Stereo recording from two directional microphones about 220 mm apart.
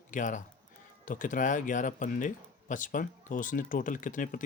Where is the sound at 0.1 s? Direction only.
35° left (ahead or behind).